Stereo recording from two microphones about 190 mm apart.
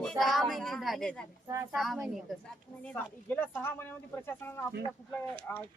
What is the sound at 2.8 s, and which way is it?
Speech, 10° left (ahead or behind).